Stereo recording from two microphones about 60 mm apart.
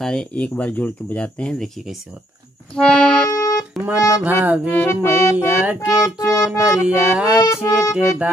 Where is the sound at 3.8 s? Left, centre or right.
Right.